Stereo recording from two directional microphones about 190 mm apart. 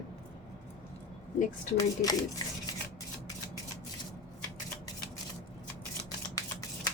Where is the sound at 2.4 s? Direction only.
20° left (ahead or behind).